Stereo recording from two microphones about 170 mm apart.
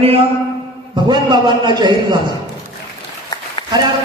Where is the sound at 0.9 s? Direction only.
25° right (ahead or behind).